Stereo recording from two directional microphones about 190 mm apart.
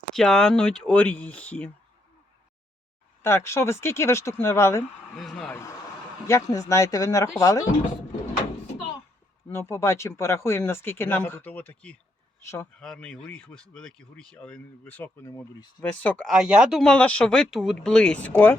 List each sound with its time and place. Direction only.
0.1 s speech: 5° left (ahead or behind)
3.2 s speech: 15° left (ahead or behind)
5.1 s speech: centre (ahead or behind); by 7.6 s 15° left (ahead or behind)
9.5 s speech: 15° left (ahead or behind)
16.0 s speech: 5° left (ahead or behind)